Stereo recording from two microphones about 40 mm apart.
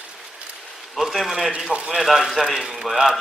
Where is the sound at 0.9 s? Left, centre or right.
Centre.